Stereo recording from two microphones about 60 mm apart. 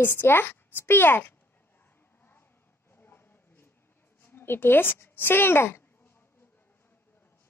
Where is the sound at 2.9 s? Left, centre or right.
Left.